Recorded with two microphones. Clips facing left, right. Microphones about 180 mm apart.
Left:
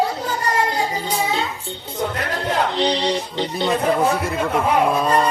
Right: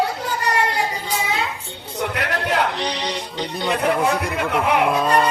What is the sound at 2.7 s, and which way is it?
Music, 25° left (ahead or behind).